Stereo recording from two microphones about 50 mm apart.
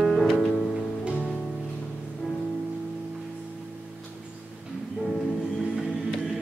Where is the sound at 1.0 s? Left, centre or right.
Right.